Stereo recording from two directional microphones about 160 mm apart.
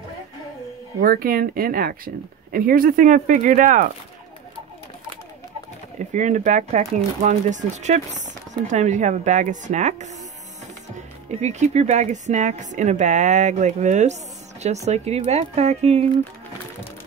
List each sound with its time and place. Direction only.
1.0 s speech: 65° right (ahead or behind)
5.9 s speech: 50° right (ahead or behind)
11.4 s speech: 45° right (ahead or behind)